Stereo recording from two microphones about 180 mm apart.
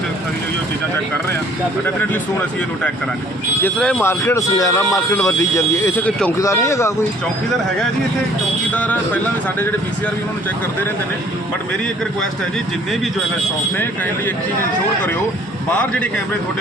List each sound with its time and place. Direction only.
3.6 s speech: 10° left (ahead or behind)
8.7 s speech: 10° left (ahead or behind)
15.7 s speech: 10° left (ahead or behind)